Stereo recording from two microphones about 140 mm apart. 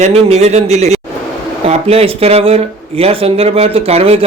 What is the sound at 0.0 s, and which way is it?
A man's voice, 50° right (ahead or behind).